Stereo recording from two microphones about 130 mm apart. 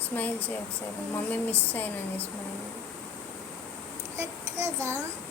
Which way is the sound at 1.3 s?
15° left (ahead or behind).